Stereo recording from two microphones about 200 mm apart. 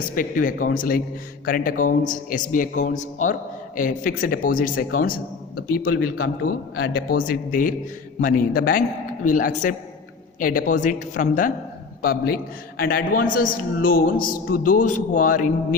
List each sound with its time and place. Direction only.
0.0 s a man's voice: 45° left (ahead or behind)